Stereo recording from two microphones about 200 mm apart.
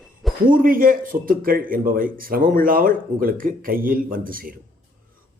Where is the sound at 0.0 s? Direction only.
Centre (ahead or behind).